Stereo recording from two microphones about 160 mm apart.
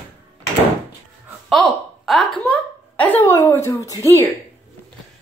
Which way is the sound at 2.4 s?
10° left (ahead or behind).